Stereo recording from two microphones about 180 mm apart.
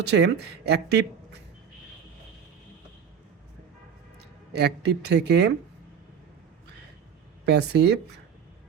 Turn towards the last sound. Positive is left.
turn(degrees=-65)  # may be behind; listen again after turning